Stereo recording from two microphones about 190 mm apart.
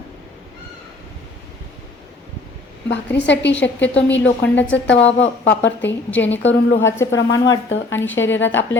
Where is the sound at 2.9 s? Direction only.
65° left (ahead or behind).